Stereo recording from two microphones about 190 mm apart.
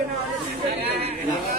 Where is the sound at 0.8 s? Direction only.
30° right (ahead or behind).